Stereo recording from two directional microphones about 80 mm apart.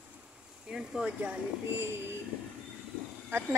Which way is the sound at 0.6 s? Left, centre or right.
Centre.